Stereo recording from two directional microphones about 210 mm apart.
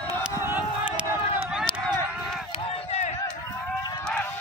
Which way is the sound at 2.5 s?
25° left (ahead or behind).